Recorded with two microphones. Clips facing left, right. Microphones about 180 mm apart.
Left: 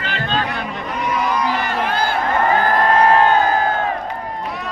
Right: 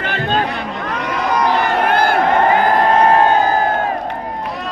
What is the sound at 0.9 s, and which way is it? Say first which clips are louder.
Crowd: right 1 dB; 75° right (ahead or behind).